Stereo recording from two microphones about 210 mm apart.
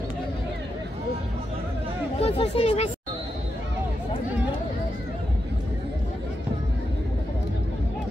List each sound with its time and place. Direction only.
2.1 s speech: 30° left (ahead or behind)